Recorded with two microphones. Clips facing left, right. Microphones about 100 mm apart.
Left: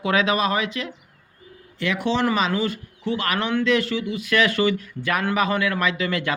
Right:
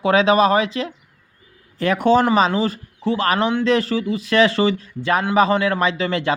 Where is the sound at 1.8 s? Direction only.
45° right (ahead or behind).